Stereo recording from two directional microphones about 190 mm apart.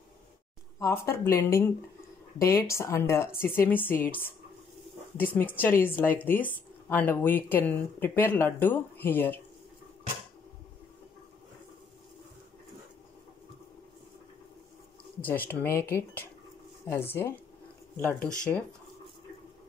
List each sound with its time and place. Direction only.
0.7 s speech: 15° left (ahead or behind)
5.1 s speech: 10° left (ahead or behind)
15.2 s speech: 10° left (ahead or behind)